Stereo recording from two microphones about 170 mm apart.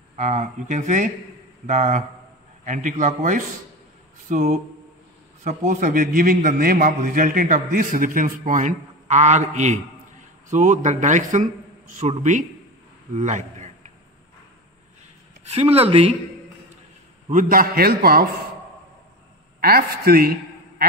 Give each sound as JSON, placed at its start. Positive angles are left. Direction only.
{"t": 0.1, "sound": "a man's voice", "side_deg": -45}
{"t": 15.4, "sound": "speech", "side_deg": -35}
{"t": 17.3, "sound": "a man's voice", "side_deg": -55}
{"t": 19.6, "sound": "a man's voice", "side_deg": -65}